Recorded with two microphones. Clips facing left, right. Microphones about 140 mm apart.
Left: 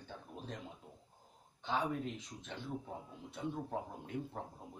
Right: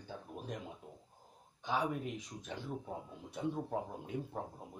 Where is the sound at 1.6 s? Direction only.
10° right (ahead or behind).